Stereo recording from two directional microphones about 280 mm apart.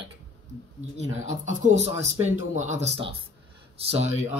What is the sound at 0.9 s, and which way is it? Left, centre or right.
Speech, right.